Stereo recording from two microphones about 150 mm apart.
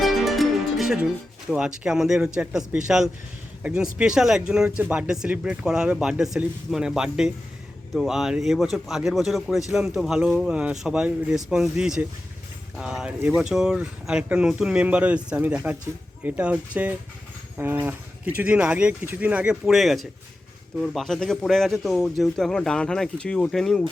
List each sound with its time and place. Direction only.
0.0 s music: centre (ahead or behind)
1.5 s a man's voice: 5° right (ahead or behind)